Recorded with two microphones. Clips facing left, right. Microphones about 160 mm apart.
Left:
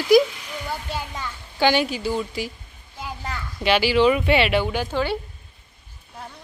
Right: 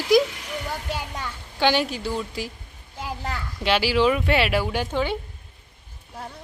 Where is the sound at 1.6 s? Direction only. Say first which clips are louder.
Left 2 dB; centre (ahead or behind).